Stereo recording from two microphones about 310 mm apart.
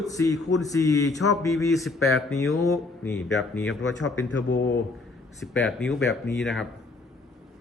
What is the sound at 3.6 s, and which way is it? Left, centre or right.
Speech, left.